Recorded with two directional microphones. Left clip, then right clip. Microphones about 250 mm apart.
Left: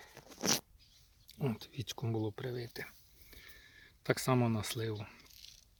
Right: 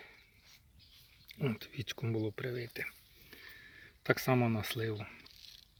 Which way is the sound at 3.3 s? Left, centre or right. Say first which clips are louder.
Right 4 dB; centre.